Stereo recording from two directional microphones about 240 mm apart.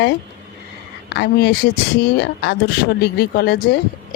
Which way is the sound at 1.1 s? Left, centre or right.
Left.